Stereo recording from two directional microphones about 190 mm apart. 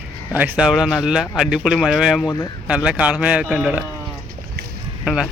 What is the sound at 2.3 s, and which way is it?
Speech, 20° left (ahead or behind).